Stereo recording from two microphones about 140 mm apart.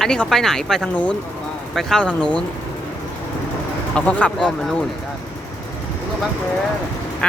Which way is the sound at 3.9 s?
10° left (ahead or behind).